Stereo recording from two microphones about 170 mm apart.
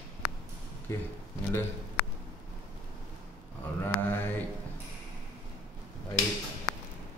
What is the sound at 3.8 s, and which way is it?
Mantra, 10° left (ahead or behind).